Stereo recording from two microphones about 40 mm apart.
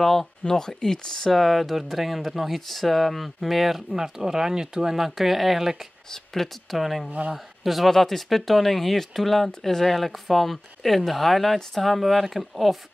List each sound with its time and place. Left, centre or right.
0.0 s speech: centre
6.3 s speech: centre
7.1 s speech: right
7.6 s speech: centre